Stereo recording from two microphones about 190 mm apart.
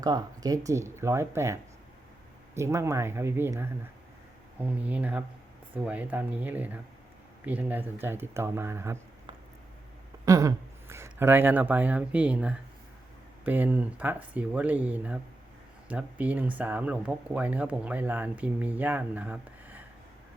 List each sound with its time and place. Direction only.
0.0 s speech: 20° right (ahead or behind)
2.6 s speech: 15° right (ahead or behind)
10.2 s speech: 15° right (ahead or behind)